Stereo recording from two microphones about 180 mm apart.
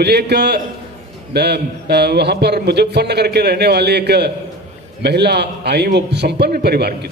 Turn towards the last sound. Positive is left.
turn(degrees=-60)  # may be behind; listen again after turning